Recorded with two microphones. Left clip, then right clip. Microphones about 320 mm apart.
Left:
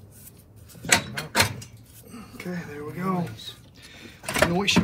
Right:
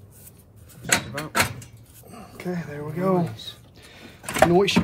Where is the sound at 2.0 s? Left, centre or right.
Right.